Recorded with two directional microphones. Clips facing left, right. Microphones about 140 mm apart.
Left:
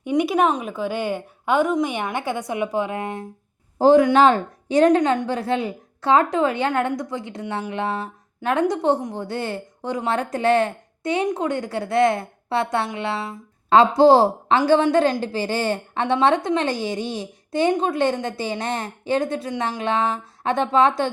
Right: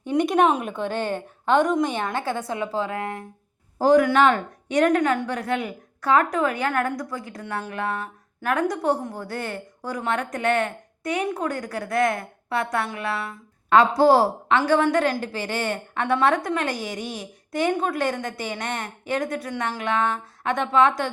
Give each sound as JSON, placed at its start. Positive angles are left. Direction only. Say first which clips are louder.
{"t": 0.1, "sound": "a woman's voice", "louder": "even", "side_deg": 5}